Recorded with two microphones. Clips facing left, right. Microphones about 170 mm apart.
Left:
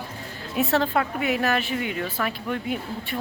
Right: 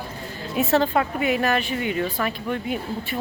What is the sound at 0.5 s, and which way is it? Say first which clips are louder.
A woman's voice: right 2 dB; centre (ahead or behind).